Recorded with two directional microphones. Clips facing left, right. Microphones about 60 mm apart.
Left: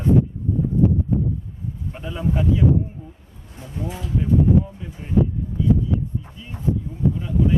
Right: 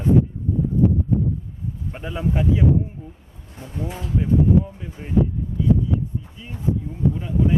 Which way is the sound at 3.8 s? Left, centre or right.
Right.